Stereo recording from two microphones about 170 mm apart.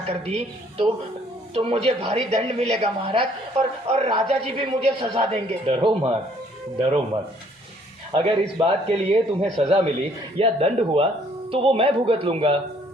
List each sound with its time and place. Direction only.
0.0 s speech: 35° right (ahead or behind)
8.1 s speech: 35° right (ahead or behind)